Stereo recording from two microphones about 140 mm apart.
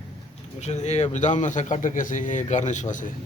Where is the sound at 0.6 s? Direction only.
55° left (ahead or behind).